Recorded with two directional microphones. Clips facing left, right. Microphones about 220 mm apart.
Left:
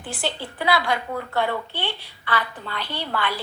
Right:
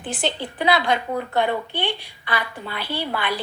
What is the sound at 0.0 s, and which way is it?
A woman's voice, 20° right (ahead or behind).